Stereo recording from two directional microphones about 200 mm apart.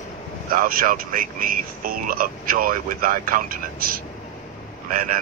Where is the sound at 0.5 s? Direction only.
45° right (ahead or behind).